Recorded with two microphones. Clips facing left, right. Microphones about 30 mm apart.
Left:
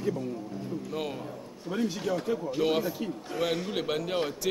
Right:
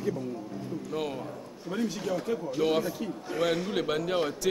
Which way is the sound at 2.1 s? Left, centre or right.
Left.